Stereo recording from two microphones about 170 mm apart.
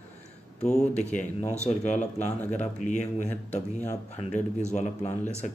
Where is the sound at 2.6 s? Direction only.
45° left (ahead or behind).